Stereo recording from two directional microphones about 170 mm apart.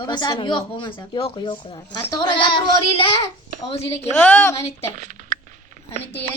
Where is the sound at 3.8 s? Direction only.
15° left (ahead or behind).